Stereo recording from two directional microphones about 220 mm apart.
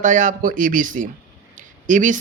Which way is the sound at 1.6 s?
35° right (ahead or behind).